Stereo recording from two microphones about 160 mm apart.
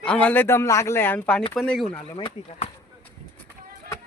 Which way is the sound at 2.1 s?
30° left (ahead or behind).